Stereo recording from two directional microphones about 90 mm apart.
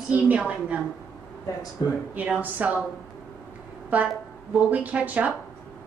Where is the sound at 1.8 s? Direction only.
50° left (ahead or behind).